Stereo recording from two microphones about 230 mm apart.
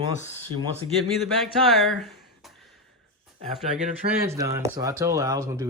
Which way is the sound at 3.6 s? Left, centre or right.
Right.